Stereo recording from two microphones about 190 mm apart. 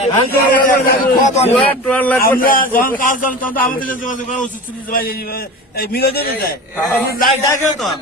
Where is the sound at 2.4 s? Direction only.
45° left (ahead or behind).